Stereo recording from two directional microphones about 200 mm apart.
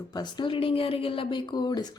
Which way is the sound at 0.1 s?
20° left (ahead or behind).